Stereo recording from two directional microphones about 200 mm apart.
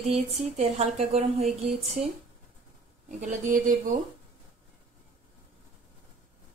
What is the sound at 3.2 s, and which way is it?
Speech, 35° right (ahead or behind).